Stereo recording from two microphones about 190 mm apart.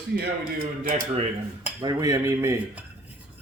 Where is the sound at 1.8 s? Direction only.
20° right (ahead or behind).